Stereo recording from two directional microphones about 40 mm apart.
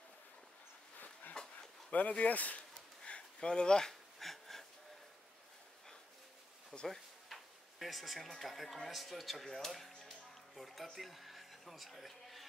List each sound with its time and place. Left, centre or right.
1.4 s dog: left
1.9 s speech: left
3.1 s a sound: left
4.2 s wheeze: centre
6.7 s speech: centre
7.8 s speech: centre